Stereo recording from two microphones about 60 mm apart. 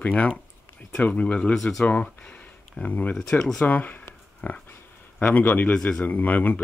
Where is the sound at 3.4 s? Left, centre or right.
Centre.